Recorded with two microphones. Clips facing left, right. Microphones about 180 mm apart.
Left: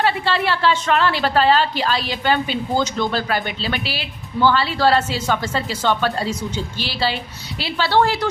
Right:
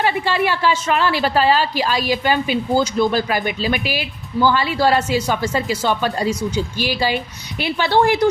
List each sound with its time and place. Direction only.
0.0 s a woman's voice: 15° right (ahead or behind)